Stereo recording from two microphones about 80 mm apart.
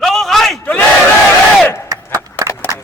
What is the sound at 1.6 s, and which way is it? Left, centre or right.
Battle cry, left.